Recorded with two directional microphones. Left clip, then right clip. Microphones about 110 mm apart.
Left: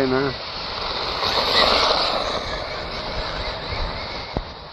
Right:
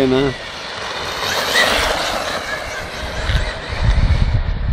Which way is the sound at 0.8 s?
5° left (ahead or behind).